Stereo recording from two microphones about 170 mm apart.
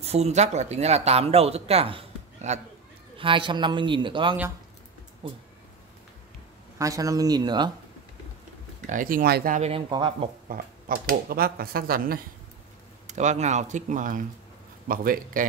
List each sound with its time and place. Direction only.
0.0 s a man's voice: 35° right (ahead or behind)
6.8 s a man's voice: 20° right (ahead or behind)
8.8 s speech: 55° right (ahead or behind)
9.6 s speech: 35° right (ahead or behind)
10.5 s speech: 55° right (ahead or behind)
13.0 s speech: 45° right (ahead or behind)